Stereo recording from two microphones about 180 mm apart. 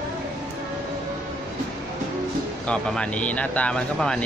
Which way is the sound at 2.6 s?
5° left (ahead or behind).